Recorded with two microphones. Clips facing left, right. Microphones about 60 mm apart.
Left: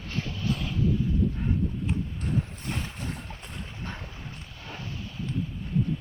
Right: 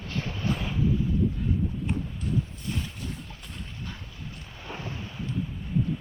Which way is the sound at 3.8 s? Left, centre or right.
Left.